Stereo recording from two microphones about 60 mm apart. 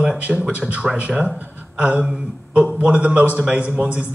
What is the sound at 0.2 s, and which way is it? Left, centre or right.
A man's voice, right.